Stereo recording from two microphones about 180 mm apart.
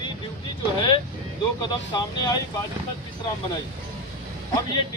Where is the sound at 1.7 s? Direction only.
25° left (ahead or behind).